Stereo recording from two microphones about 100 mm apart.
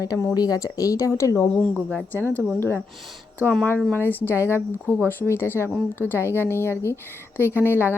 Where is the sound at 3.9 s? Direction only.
20° left (ahead or behind).